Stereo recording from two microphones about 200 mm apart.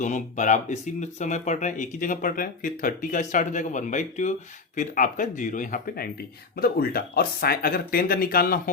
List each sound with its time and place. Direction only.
0.0 s speech: 40° left (ahead or behind)